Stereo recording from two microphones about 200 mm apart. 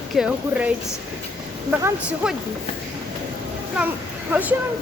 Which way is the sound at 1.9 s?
5° right (ahead or behind).